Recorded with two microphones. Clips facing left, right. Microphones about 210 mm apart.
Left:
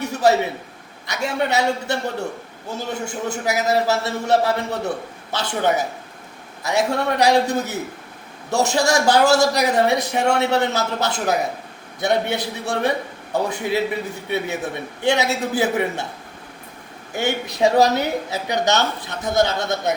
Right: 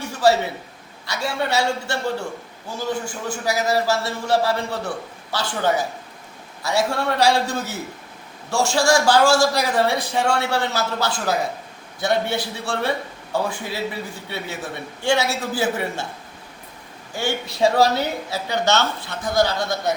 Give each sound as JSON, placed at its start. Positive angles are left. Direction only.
{"t": 0.0, "sound": "a sound", "side_deg": 20}
{"t": 1.0, "sound": "a man's voice", "side_deg": 20}
{"t": 17.2, "sound": "a man's voice", "side_deg": 20}